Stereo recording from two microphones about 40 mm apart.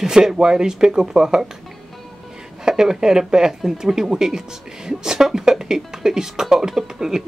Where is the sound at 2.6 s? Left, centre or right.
Centre.